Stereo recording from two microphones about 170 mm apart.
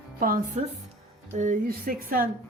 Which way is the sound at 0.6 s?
40° right (ahead or behind).